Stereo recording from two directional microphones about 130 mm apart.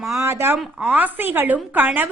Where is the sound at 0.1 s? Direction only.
20° right (ahead or behind).